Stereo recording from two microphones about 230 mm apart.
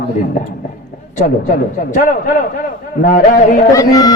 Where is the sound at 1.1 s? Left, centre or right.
Left.